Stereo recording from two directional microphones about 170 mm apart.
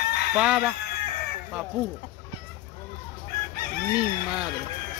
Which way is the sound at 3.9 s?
5° right (ahead or behind).